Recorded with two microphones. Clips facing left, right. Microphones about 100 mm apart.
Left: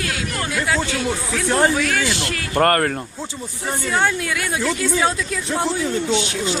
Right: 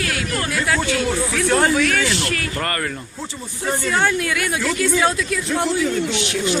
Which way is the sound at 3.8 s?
15° left (ahead or behind).